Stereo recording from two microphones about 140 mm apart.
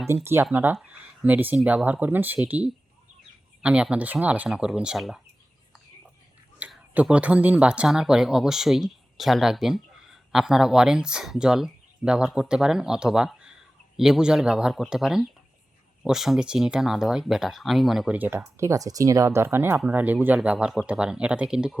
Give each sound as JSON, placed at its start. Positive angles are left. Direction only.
{"t": 0.1, "sound": "speech", "side_deg": -20}
{"t": 6.6, "sound": "speech", "side_deg": -10}